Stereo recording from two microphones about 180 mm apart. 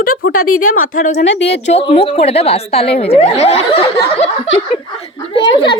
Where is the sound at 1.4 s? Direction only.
85° left.